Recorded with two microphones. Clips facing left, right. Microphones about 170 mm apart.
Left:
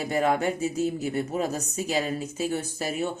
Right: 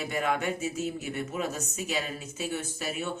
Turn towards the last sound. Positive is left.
turn(degrees=35)  # may be behind; listen again after turning